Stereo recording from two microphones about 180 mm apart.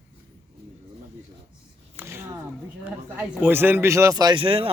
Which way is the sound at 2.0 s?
15° right (ahead or behind).